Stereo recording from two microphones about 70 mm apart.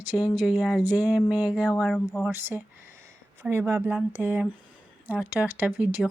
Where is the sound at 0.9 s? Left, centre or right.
Centre.